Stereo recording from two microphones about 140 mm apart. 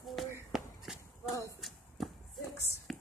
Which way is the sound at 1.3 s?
25° left (ahead or behind).